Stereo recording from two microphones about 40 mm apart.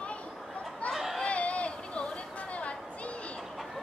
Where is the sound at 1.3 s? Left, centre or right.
Left.